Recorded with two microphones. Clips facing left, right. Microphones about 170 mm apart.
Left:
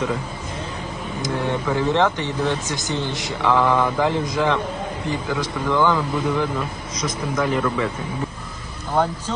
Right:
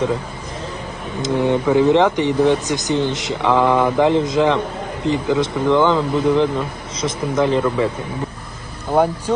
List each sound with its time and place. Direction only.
1.2 s speech: 15° right (ahead or behind)